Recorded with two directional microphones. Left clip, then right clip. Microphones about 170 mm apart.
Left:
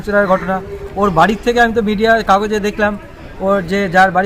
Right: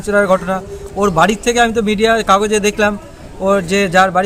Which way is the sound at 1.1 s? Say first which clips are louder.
Left 1 dB; 55° right (ahead or behind).